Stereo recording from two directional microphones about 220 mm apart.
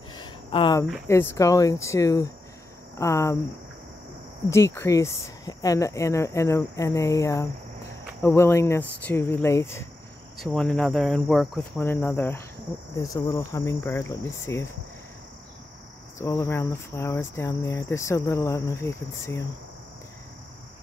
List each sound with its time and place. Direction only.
0.1 s a sound: 20° left (ahead or behind)
1.0 s cricket: 10° left (ahead or behind)
4.5 s cricket: 10° left (ahead or behind)
16.2 s cricket: 15° left (ahead or behind)